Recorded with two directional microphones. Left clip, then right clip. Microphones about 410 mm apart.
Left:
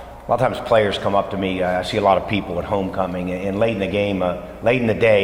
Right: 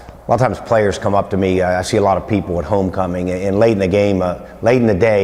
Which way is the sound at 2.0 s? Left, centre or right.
Right.